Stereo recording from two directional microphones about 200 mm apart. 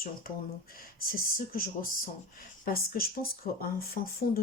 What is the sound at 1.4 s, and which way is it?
Speech, 45° left (ahead or behind).